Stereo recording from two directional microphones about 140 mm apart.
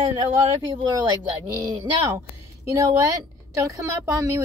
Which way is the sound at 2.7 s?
25° right (ahead or behind).